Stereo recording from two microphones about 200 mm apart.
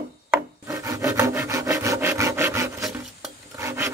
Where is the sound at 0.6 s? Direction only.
15° right (ahead or behind).